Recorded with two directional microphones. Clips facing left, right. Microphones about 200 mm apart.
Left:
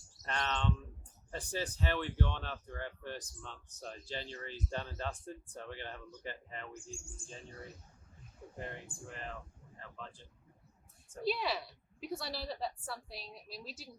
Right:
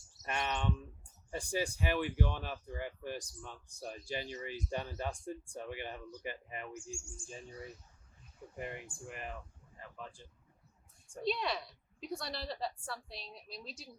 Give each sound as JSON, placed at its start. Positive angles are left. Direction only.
{"t": 0.2, "sound": "speech", "side_deg": -10}
{"t": 6.9, "sound": "bird", "side_deg": 55}
{"t": 8.5, "sound": "speech", "side_deg": -10}
{"t": 11.2, "sound": "a woman's voice", "side_deg": 5}